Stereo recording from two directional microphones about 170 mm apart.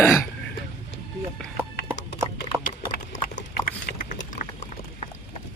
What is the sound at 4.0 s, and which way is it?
Vehicle, 45° left (ahead or behind).